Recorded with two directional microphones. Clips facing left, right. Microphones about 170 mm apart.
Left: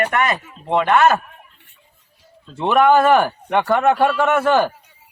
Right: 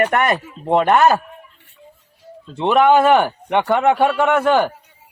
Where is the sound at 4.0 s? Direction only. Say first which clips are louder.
Right 1 dB; centre (ahead or behind).